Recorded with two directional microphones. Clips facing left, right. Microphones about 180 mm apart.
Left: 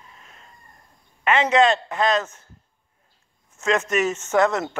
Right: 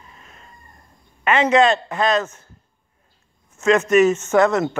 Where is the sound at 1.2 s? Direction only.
25° left (ahead or behind).